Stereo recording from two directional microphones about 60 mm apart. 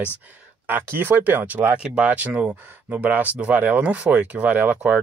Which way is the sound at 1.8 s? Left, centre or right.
Centre.